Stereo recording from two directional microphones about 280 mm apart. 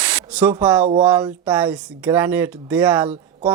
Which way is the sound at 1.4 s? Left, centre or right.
Centre.